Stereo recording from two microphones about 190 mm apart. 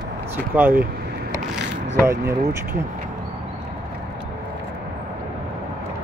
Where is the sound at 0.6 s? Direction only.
10° right (ahead or behind).